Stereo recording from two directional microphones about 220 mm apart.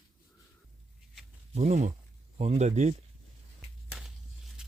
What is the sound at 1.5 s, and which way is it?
Speech, 30° right (ahead or behind).